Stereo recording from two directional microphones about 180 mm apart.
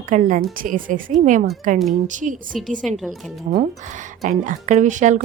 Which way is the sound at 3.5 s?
45° right (ahead or behind).